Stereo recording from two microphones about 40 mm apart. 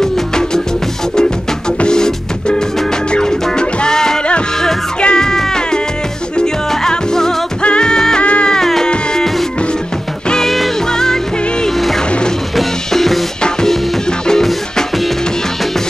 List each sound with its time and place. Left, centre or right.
0.0 s music: centre
1.8 s music: centre
8.2 s music: left
8.5 s music: centre
10.4 s music: centre
10.9 s music: centre
12.5 s music: centre
13.4 s music: centre